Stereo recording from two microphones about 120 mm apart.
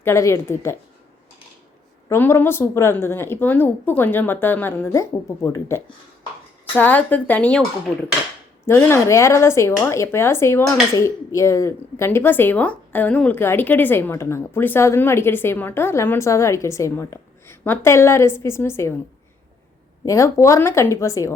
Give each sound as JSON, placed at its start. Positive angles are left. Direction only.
{"t": 0.0, "sound": "speech", "side_deg": 25}
{"t": 2.0, "sound": "speech", "side_deg": 20}
{"t": 6.7, "sound": "speech", "side_deg": 15}
{"t": 8.6, "sound": "speech", "side_deg": 20}
{"t": 20.1, "sound": "speech", "side_deg": 25}